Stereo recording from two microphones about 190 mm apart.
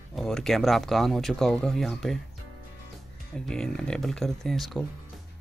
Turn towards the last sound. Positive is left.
turn(degrees=0)  # may be behind; listen again after turning